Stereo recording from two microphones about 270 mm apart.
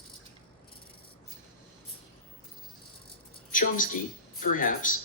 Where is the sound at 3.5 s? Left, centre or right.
Left.